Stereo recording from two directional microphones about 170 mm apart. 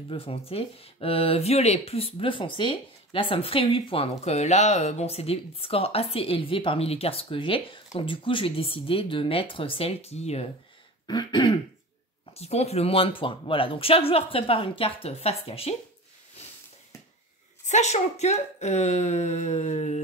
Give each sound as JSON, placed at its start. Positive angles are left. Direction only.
{"t": 0.1, "sound": "speech", "side_deg": 35}
{"t": 11.1, "sound": "throat clearing", "side_deg": 25}
{"t": 12.4, "sound": "speech", "side_deg": 40}
{"t": 17.6, "sound": "speech", "side_deg": 45}